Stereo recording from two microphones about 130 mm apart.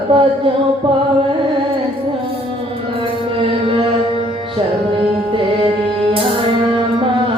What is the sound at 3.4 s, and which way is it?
Music, 45° right (ahead or behind).